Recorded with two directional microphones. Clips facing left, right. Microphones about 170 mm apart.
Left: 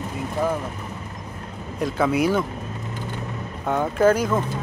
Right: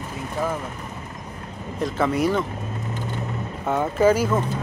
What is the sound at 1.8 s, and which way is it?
Speech, centre (ahead or behind).